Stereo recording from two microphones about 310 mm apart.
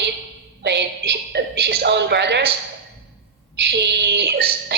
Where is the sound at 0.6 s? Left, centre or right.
Right.